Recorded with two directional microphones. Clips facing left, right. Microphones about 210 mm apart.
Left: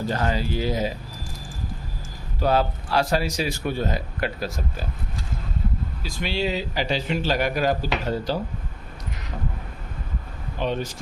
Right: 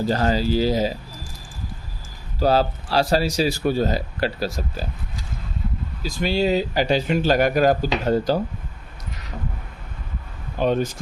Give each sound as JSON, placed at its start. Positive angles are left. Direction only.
{"t": 0.0, "sound": "speech", "side_deg": -35}
{"t": 2.4, "sound": "speech", "side_deg": -35}
{"t": 6.0, "sound": "speech", "side_deg": -40}
{"t": 10.6, "sound": "speech", "side_deg": -45}